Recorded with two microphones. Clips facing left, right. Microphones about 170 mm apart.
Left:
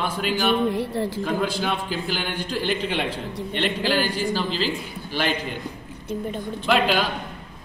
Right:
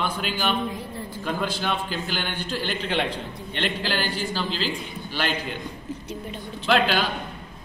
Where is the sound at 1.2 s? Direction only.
10° left (ahead or behind).